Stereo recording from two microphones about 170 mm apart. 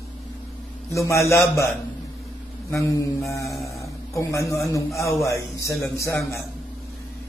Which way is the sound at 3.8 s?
15° left (ahead or behind).